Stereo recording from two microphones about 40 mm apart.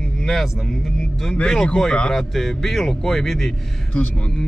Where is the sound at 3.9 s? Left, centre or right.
Left.